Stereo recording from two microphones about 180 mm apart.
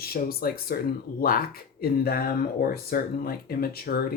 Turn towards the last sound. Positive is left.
turn(degrees=60)  # may be behind; listen again after turning